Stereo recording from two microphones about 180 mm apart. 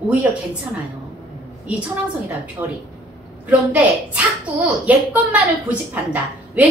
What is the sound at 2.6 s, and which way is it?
Speech, 25° right (ahead or behind).